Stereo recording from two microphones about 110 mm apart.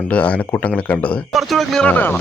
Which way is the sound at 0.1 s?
10° left (ahead or behind).